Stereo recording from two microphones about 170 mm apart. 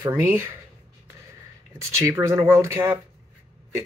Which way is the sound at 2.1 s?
15° right (ahead or behind).